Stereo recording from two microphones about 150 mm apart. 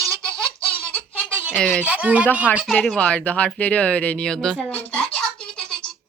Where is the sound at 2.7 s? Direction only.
5° left (ahead or behind).